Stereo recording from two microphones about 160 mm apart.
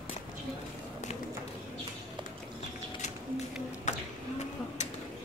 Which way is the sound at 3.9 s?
45° left (ahead or behind).